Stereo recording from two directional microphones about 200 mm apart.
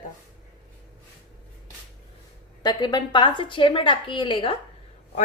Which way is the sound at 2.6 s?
20° left (ahead or behind).